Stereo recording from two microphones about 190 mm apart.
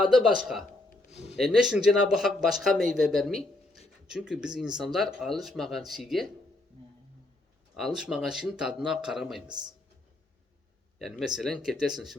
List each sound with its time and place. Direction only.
0.0 s speech: centre (ahead or behind)
7.8 s speech: centre (ahead or behind)
9.5 s speech: 20° right (ahead or behind)
11.0 s speech: centre (ahead or behind)